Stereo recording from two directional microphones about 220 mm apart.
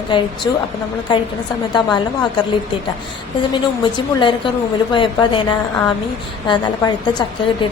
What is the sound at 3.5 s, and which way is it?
A woman's voice, 20° left (ahead or behind).